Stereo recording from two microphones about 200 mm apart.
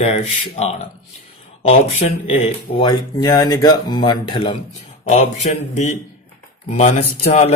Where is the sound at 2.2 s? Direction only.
30° left (ahead or behind).